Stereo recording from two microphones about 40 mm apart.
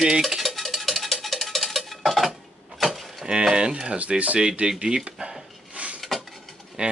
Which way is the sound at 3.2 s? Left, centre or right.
Right.